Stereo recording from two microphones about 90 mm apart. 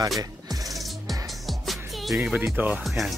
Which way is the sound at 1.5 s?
Centre (ahead or behind).